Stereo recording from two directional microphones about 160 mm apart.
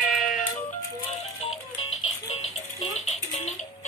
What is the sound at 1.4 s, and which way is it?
Music, 40° left (ahead or behind).